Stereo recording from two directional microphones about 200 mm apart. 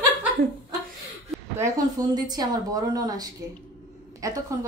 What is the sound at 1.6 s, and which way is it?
A woman's voice, 20° right (ahead or behind).